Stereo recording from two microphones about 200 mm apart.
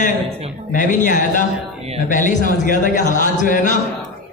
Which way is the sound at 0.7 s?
40° left (ahead or behind).